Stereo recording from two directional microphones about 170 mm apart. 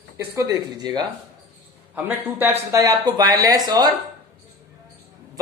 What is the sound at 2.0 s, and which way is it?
Speech, 10° right (ahead or behind).